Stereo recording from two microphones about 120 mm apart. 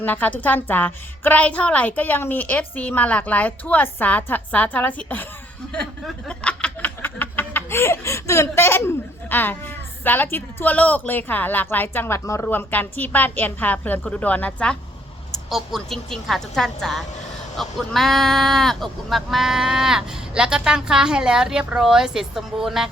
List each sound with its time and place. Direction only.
0.0 s speech: 15° left (ahead or behind)
5.6 s chuckle: 5° left (ahead or behind)
6.2 s snicker: 10° left (ahead or behind)
9.3 s speech: 15° left (ahead or behind)
15.4 s speech: centre (ahead or behind)